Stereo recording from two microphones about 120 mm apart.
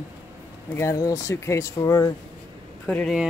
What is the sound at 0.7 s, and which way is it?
Speech, 25° left (ahead or behind).